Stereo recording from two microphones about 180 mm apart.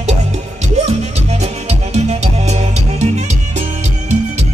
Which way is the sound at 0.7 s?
35° right (ahead or behind).